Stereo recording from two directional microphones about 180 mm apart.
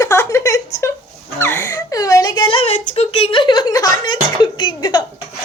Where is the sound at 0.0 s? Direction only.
15° left (ahead or behind).